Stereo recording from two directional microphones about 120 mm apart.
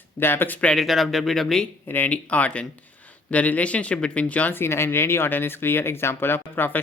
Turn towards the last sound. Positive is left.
turn(degrees=15)  # may be behind; listen again after turning